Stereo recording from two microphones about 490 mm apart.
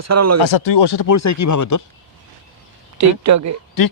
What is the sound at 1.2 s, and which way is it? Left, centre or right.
Speech, left.